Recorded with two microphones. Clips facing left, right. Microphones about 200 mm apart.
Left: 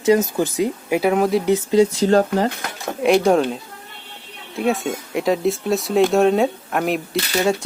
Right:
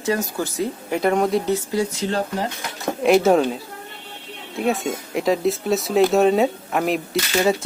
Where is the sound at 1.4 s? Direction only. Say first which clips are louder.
Left 6 dB; 20° left (ahead or behind).